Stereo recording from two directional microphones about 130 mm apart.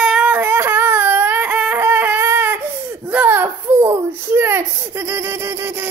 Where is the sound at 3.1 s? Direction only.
15° right (ahead or behind).